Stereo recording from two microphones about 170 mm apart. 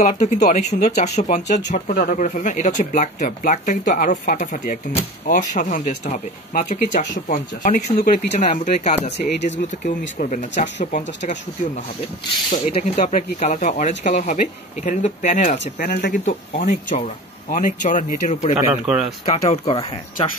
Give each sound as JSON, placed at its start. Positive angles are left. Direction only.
{"t": 0.0, "sound": "speech", "side_deg": 45}
{"t": 12.4, "sound": "speech", "side_deg": 40}
{"t": 15.6, "sound": "speech", "side_deg": 65}
{"t": 18.6, "sound": "speech", "side_deg": -10}
{"t": 19.2, "sound": "speech", "side_deg": 40}